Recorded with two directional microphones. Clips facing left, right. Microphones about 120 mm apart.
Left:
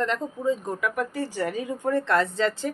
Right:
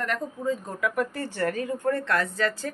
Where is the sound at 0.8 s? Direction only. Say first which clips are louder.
Even; 5° left (ahead or behind); by 2.7 s 20° left (ahead or behind).